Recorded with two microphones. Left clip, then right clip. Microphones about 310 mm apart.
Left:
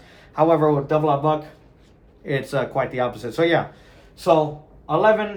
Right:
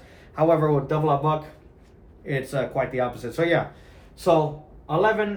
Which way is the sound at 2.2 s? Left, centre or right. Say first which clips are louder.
Left 3 dB; centre.